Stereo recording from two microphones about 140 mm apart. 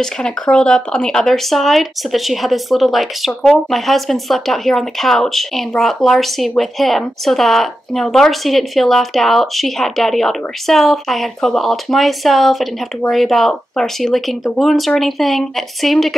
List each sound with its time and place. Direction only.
0.0 s speech: 5° left (ahead or behind)